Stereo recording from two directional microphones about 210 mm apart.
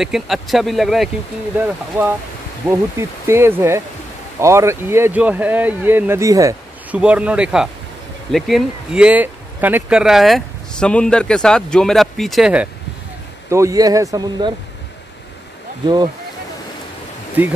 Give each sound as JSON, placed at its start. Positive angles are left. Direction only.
{"t": 0.0, "sound": "speech", "side_deg": 0}
{"t": 13.5, "sound": "speech", "side_deg": -15}
{"t": 17.4, "sound": "speech", "side_deg": -10}